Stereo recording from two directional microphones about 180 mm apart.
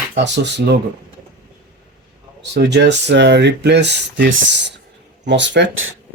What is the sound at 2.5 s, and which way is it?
Speech, 70° right (ahead or behind).